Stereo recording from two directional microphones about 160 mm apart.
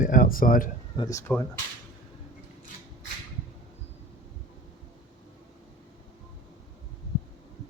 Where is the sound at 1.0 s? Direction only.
20° left (ahead or behind).